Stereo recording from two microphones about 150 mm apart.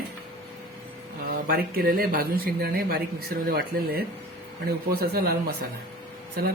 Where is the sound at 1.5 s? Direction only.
80° right.